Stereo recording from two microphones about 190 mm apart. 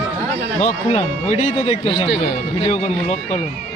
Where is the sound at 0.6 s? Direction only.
35° left (ahead or behind).